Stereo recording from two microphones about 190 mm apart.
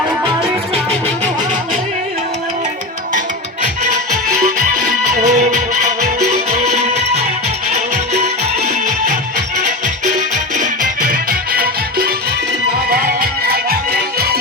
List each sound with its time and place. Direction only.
3.8 s music: 40° right (ahead or behind)